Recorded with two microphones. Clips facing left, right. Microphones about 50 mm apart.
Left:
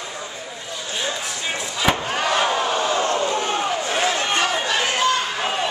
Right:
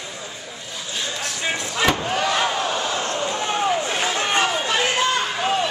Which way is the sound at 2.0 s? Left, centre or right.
Centre.